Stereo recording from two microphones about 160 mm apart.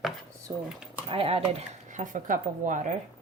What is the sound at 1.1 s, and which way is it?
A woman's voice, 35° right (ahead or behind).